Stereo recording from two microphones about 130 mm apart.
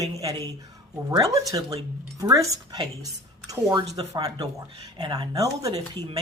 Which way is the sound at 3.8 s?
55° right (ahead or behind).